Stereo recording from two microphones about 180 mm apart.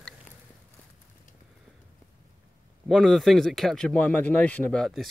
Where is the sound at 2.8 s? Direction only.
Centre (ahead or behind).